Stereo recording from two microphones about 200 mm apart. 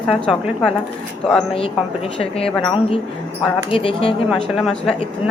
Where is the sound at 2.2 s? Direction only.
30° left (ahead or behind).